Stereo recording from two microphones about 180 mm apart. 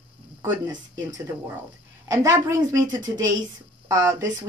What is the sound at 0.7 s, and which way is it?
A woman's voice, 20° right (ahead or behind).